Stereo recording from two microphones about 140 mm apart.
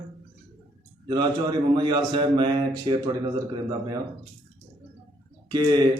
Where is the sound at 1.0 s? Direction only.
30° right (ahead or behind).